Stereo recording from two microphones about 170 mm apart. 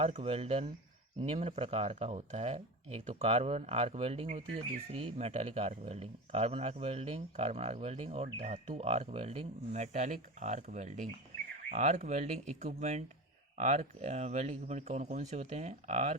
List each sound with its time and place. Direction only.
0.0 s speech: 35° right (ahead or behind)